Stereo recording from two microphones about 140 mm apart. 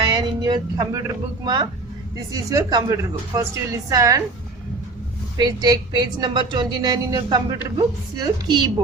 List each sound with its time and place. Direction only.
0.0 s a woman's voice: 30° right (ahead or behind)
5.4 s a woman's voice: 30° right (ahead or behind)